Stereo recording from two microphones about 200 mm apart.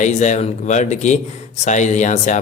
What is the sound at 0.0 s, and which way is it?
A man's voice, 35° left (ahead or behind).